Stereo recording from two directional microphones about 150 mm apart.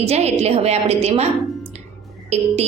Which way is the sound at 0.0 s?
45° right (ahead or behind).